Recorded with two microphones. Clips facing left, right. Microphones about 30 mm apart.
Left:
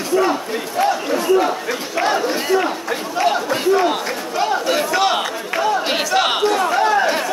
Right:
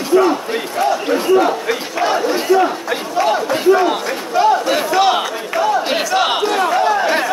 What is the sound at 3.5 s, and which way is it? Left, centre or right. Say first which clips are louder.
Crowd: right 3 dB; centre.